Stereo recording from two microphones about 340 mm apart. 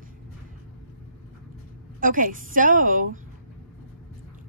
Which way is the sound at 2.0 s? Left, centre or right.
Right.